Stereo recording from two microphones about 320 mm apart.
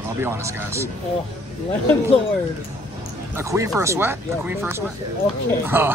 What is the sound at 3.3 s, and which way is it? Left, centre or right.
Speech, centre.